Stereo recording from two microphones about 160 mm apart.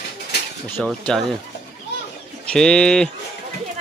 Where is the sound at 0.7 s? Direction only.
Centre (ahead or behind).